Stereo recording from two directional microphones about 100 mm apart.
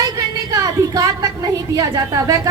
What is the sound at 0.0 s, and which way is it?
A woman's voice, 40° right (ahead or behind).